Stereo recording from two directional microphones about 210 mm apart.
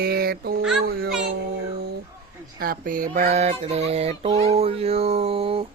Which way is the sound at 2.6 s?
40° right (ahead or behind).